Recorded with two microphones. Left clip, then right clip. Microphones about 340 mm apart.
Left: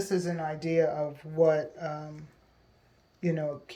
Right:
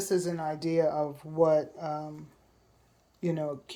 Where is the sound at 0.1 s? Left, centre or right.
Centre.